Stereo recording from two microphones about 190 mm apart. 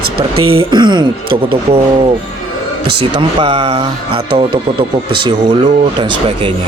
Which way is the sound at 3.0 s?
25° right (ahead or behind).